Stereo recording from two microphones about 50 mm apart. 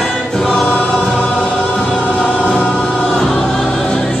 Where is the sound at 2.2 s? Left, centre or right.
Left.